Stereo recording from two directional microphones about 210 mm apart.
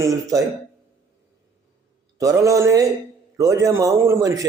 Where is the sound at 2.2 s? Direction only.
15° right (ahead or behind).